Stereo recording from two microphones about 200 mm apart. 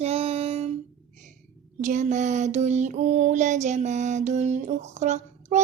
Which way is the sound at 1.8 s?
40° right (ahead or behind).